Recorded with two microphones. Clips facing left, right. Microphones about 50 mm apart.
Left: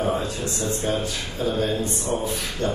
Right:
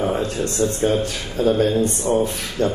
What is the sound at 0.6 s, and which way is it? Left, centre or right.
Speech, right.